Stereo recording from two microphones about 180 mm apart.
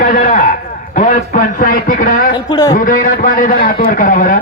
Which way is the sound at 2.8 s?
50° left (ahead or behind).